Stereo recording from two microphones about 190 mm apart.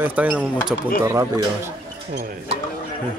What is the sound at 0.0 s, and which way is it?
Speech, 10° right (ahead or behind).